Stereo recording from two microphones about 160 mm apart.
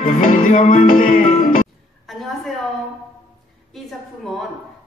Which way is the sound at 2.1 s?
Centre (ahead or behind).